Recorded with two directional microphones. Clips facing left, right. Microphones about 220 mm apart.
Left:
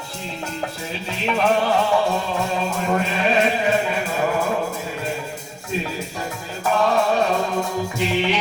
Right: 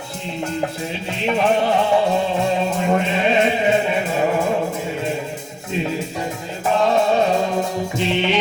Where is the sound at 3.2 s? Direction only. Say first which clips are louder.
Right 2 dB; 25° right (ahead or behind).